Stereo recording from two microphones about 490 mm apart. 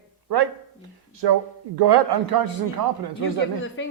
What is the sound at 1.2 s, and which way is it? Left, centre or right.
A man's voice, right.